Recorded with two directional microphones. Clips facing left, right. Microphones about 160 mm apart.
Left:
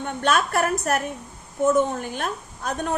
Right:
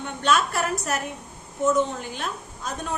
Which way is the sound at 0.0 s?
50° left (ahead or behind).